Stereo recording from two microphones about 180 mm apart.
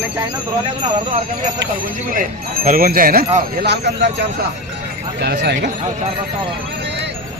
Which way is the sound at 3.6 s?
70° right (ahead or behind).